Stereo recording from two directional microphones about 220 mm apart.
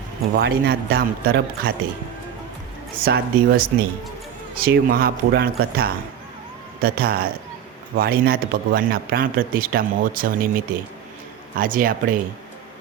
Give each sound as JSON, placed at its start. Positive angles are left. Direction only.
{"t": 0.3, "sound": "a man's voice", "side_deg": -45}
{"t": 2.9, "sound": "a man's voice", "side_deg": -40}
{"t": 11.5, "sound": "speech", "side_deg": -40}